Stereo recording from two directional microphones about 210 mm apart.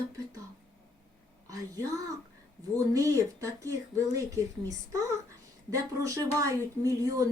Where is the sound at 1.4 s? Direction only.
15° right (ahead or behind).